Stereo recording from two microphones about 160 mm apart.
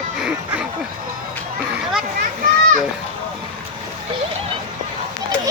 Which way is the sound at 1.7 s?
5° right (ahead or behind).